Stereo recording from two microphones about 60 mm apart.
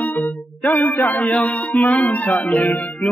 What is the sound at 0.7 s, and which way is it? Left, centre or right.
Speech, left.